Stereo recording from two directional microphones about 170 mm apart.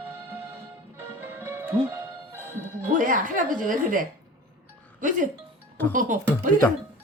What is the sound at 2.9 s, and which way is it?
A woman's voice, 50° right (ahead or behind).